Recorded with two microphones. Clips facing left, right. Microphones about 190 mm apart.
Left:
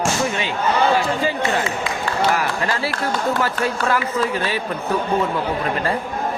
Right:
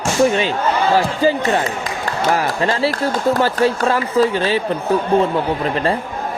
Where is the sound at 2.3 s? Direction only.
30° right (ahead or behind).